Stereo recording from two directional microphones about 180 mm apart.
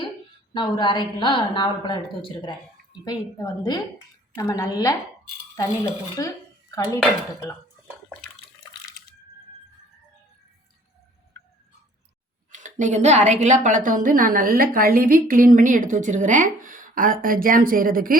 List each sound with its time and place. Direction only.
0.5 s a woman's voice: 25° left (ahead or behind)
12.5 s a woman's voice: 45° right (ahead or behind)